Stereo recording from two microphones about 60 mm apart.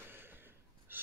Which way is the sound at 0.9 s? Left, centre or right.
Right.